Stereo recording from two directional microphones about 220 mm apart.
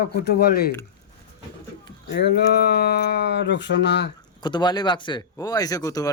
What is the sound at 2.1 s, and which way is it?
Speech, 50° left (ahead or behind).